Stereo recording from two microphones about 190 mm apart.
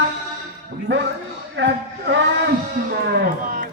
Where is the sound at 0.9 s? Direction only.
65° right (ahead or behind).